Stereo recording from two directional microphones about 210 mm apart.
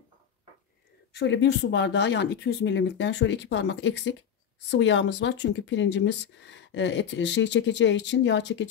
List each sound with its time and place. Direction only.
1.1 s speech: 60° left (ahead or behind)